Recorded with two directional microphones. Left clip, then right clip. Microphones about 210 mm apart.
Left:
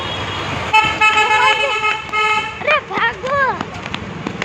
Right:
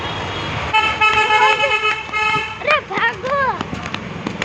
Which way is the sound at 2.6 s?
5° left (ahead or behind).